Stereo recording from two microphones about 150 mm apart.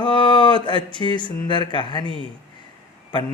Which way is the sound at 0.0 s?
30° left (ahead or behind).